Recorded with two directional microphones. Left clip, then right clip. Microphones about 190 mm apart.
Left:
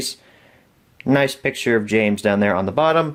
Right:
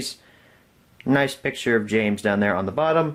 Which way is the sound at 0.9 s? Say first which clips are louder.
Left 3 dB; 30° left (ahead or behind).